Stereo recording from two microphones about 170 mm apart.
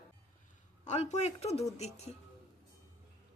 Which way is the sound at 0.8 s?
40° left (ahead or behind).